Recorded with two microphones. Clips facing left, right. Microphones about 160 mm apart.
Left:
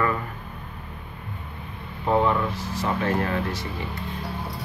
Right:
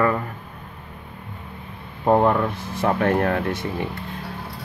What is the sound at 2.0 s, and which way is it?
Speech, 55° right (ahead or behind).